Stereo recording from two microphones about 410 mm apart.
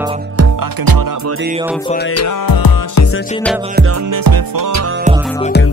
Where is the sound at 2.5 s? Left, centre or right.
Left.